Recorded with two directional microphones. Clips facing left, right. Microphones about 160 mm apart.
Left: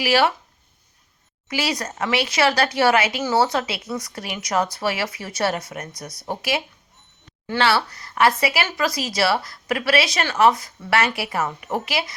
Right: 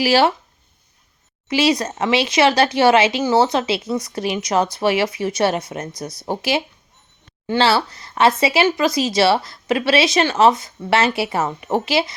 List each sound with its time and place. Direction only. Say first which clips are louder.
0.0 s speech: right 3 dB; 30° right (ahead or behind)
1.5 s speech: right 8 dB; 20° right (ahead or behind)